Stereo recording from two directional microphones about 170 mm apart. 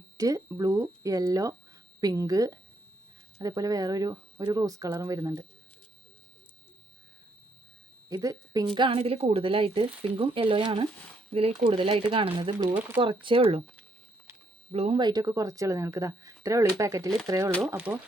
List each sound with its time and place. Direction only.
0.2 s speech: 20° right (ahead or behind)
8.1 s a woman's voice: 20° right (ahead or behind)
14.7 s speech: 35° right (ahead or behind); by 18.0 s 10° right (ahead or behind)